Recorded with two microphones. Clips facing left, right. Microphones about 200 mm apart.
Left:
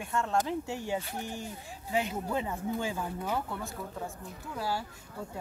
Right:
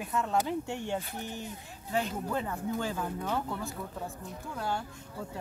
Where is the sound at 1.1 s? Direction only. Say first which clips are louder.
Left 1 dB; 45° left (ahead or behind).